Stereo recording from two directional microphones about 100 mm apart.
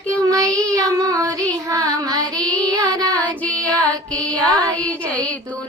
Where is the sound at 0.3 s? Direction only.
35° right (ahead or behind).